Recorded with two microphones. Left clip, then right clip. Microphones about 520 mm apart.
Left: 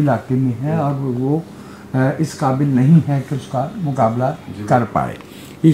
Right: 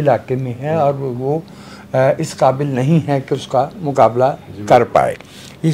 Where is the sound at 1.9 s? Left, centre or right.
Right.